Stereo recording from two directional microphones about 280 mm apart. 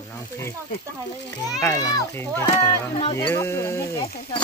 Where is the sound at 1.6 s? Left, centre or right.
Centre.